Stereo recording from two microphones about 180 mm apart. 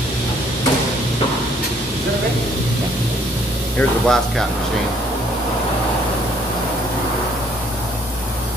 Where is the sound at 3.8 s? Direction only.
5° left (ahead or behind).